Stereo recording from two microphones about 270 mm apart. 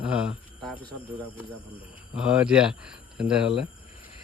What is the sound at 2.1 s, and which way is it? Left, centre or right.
Speech, centre.